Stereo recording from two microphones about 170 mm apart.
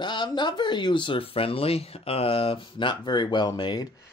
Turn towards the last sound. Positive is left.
turn(degrees=25)  # may be behind; listen again after turning